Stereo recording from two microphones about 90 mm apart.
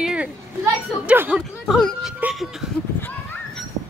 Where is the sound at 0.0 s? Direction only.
10° right (ahead or behind).